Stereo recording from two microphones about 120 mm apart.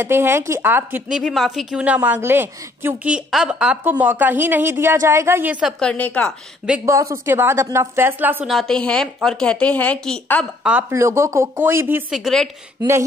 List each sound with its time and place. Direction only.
0.0 s speech: 20° right (ahead or behind)
1.1 s a woman's voice: centre (ahead or behind); by 3.2 s 20° right (ahead or behind)
3.3 s a woman's voice: 5° right (ahead or behind)
5.6 s a woman's voice: centre (ahead or behind)
6.9 s speech: 25° right (ahead or behind)
8.5 s a woman's voice: 5° left (ahead or behind)
10.6 s speech: 10° right (ahead or behind)
10.9 s speech: 25° right (ahead or behind)
12.1 s a woman's voice: centre (ahead or behind)